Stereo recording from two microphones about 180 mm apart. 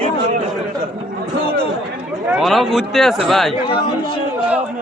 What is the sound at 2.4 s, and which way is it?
A man's voice, centre (ahead or behind).